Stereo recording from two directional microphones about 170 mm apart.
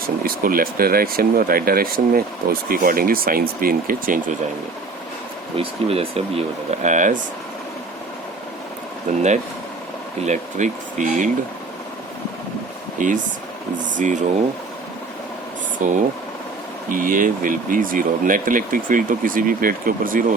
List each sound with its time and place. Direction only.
0.2 s speech: 60° right (ahead or behind)
5.5 s speech: 35° right (ahead or behind)
9.1 s speech: 45° right (ahead or behind)
10.2 s speech: 45° right (ahead or behind)
13.0 s speech: 50° right (ahead or behind)
15.8 s speech: 50° right (ahead or behind)